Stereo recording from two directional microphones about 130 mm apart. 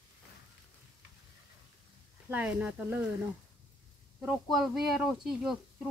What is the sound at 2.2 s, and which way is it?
Speech, 15° right (ahead or behind).